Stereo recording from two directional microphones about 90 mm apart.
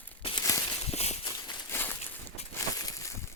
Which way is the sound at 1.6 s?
25° left (ahead or behind).